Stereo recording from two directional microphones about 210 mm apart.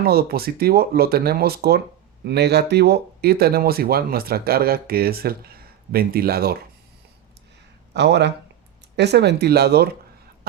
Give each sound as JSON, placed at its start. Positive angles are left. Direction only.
{"t": 0.0, "sound": "speech", "side_deg": -45}
{"t": 7.9, "sound": "speech", "side_deg": -55}
{"t": 10.5, "sound": "cough", "side_deg": -45}